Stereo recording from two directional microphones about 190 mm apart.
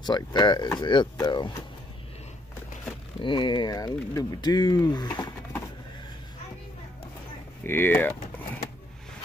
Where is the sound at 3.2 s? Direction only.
25° left (ahead or behind).